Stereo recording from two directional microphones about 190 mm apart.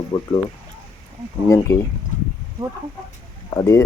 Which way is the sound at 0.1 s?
20° left (ahead or behind).